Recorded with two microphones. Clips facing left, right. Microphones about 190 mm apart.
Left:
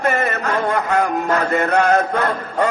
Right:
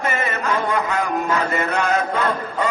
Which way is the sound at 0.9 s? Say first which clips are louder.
Left 3 dB; 60° left (ahead or behind).